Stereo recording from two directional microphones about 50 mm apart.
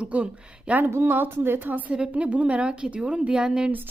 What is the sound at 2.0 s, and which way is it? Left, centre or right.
A woman's voice, right.